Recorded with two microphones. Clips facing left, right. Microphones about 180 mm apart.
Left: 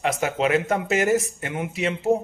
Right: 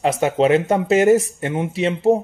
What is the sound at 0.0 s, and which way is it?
Speech, 30° right (ahead or behind).